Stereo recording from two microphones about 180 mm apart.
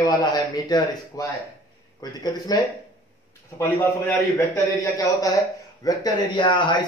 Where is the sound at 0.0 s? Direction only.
20° left (ahead or behind).